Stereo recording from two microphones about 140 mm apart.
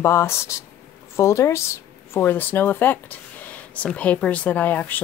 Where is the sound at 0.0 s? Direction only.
20° left (ahead or behind).